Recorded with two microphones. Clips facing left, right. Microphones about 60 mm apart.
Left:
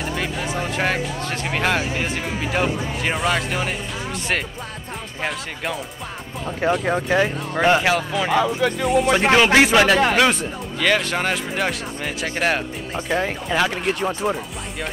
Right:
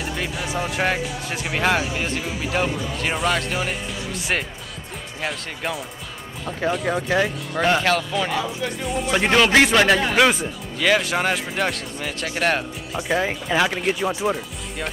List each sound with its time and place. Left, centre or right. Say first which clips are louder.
0.4 s speech: right 2 dB; centre
5.2 s speech: left 1 dB; centre
6.8 s speech: left 2 dB; centre
8.4 s music: left 6 dB; left
9.1 s speech: even; centre
13.1 s speech: right 1 dB; centre